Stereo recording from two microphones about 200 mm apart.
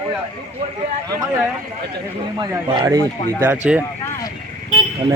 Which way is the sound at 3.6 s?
5° right (ahead or behind).